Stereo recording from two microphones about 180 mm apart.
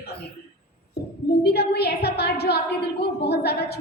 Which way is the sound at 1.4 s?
65° left (ahead or behind).